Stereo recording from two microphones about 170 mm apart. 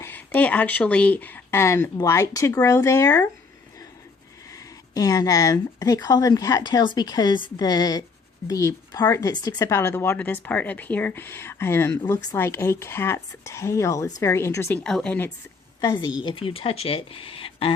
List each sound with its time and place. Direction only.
0.0 s speech: 10° left (ahead or behind)
4.5 s speech: 20° left (ahead or behind)
14.8 s speech: 5° left (ahead or behind)
15.8 s a woman's voice: 25° left (ahead or behind)